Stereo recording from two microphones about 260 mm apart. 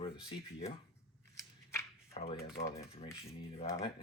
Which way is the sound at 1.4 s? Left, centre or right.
Centre.